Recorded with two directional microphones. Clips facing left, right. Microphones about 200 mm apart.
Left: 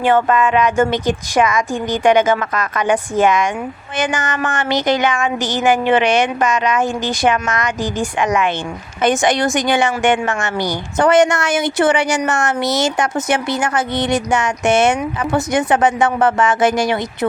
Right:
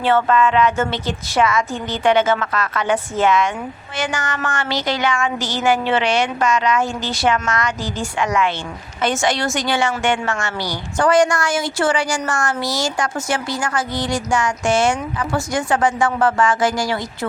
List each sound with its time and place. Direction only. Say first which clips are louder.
0.0 s a woman's voice: left 2 dB; 15° left (ahead or behind)